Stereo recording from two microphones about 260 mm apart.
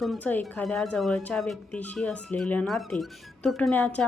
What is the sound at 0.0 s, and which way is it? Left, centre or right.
Speech, centre.